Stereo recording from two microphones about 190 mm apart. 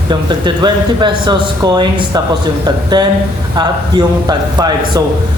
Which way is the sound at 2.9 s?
20° right (ahead or behind).